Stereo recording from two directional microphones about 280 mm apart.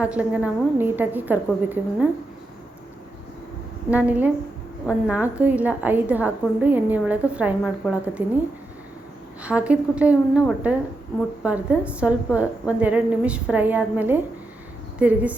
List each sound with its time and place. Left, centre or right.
0.0 s a woman's voice: centre
3.8 s a woman's voice: centre
9.4 s a woman's voice: centre